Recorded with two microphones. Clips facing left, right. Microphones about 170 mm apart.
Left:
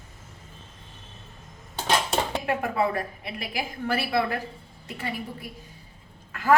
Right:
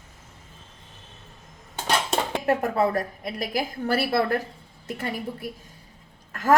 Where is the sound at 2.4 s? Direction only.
40° right (ahead or behind).